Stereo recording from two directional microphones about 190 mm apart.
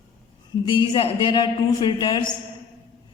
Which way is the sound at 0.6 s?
25° left (ahead or behind).